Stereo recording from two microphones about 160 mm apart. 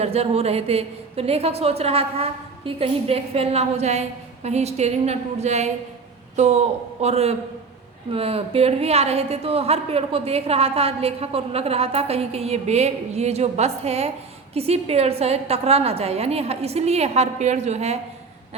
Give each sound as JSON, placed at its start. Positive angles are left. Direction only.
{"t": 0.0, "sound": "a woman's voice", "side_deg": -40}